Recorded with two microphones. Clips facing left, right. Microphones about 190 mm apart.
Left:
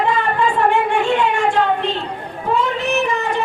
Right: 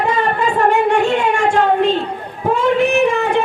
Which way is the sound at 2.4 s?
50° right (ahead or behind).